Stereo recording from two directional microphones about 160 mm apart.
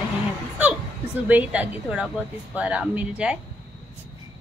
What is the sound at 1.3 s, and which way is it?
Speech, 10° right (ahead or behind).